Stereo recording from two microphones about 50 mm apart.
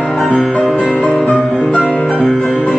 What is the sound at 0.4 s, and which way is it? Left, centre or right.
Music, centre.